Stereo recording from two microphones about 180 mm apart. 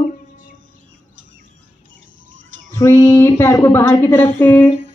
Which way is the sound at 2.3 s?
90° right.